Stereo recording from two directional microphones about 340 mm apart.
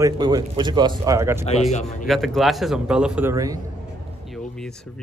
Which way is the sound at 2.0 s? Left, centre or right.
Centre.